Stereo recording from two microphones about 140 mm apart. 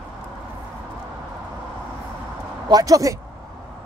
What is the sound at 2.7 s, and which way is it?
Speech, 25° right (ahead or behind).